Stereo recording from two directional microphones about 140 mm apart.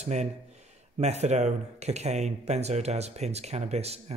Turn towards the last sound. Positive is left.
turn(degrees=-50)  # may be behind; listen again after turning